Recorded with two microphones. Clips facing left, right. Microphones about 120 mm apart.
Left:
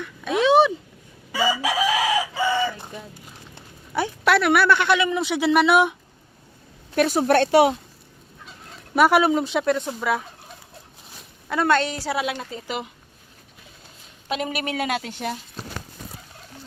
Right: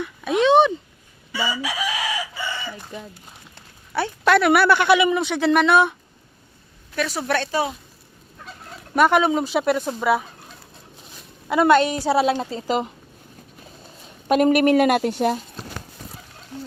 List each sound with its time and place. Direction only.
0.3 s a sound: 5° left (ahead or behind)
1.3 s chicken: 90° left
3.5 s a sound: 15° left (ahead or behind)
4.3 s speech: centre (ahead or behind)
5.2 s speech: 5° left (ahead or behind)
6.9 s a woman's voice: 50° left (ahead or behind)
7.5 s speech: 75° left (ahead or behind)
9.0 s speech: 5° left (ahead or behind)
11.4 s a woman's voice: 15° right (ahead or behind)
12.1 s a woman's voice: 30° right (ahead or behind)
14.3 s a woman's voice: 50° right (ahead or behind)